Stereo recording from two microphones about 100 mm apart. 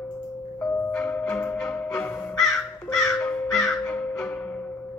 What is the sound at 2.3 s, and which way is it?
Crow, 5° left (ahead or behind).